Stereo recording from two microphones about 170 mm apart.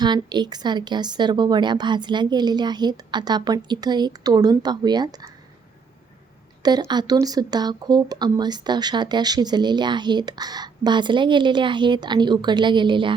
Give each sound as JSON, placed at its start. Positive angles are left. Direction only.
{"t": 0.0, "sound": "speech", "side_deg": -25}
{"t": 6.6, "sound": "speech", "side_deg": -25}